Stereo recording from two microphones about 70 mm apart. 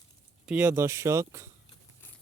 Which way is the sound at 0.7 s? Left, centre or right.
Right.